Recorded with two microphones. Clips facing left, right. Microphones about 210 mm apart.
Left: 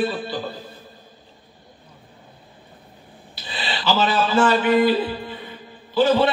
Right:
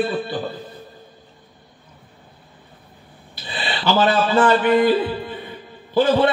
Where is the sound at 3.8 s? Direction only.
55° right (ahead or behind).